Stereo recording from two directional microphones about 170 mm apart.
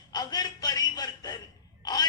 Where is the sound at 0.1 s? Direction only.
25° left (ahead or behind).